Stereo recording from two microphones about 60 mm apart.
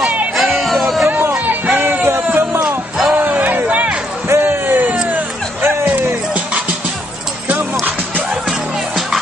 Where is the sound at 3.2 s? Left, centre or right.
Right.